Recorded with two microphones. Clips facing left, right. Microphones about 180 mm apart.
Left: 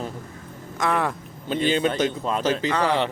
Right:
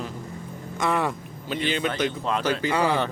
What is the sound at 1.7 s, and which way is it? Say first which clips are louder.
Speech: left 3 dB; 25° left (ahead or behind).